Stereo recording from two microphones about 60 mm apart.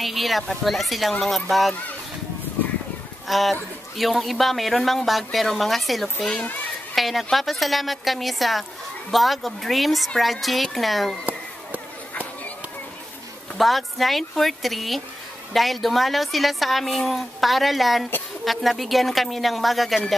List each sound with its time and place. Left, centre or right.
0.0 s speech: centre
3.3 s speech: centre
13.6 s speech: centre